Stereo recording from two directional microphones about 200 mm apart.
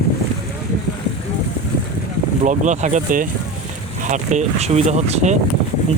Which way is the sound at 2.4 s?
40° right (ahead or behind).